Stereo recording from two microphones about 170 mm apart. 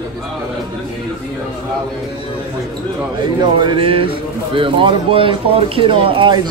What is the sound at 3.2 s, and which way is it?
Speech, 30° right (ahead or behind).